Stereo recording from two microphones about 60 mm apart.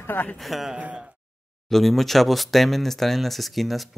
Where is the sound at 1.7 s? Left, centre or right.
Centre.